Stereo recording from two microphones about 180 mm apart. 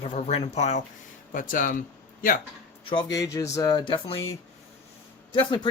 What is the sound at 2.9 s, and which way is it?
Speech, 25° left (ahead or behind).